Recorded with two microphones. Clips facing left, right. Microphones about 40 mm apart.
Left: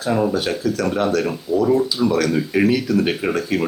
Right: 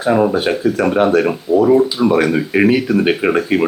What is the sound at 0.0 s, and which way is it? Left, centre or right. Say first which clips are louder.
Speech: right 6 dB; right.